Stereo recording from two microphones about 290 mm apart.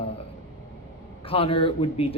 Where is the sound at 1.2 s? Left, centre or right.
Centre.